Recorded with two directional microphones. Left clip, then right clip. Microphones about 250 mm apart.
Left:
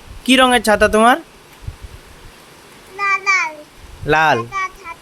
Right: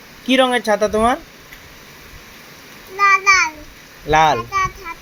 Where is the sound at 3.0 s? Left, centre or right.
Centre.